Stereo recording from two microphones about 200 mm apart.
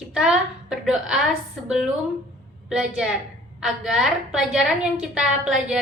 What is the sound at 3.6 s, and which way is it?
A woman's voice, 5° right (ahead or behind).